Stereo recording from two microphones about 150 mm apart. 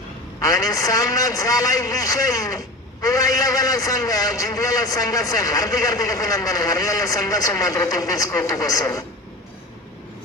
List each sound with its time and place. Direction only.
0.3 s a man's voice: 20° left (ahead or behind)